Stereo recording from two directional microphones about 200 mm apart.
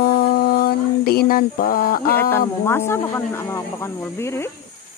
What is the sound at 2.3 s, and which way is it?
Speech, 10° left (ahead or behind).